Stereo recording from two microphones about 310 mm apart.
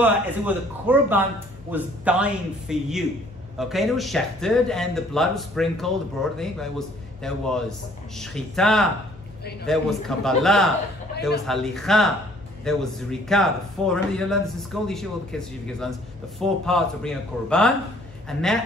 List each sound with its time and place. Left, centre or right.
0.0 s speech: centre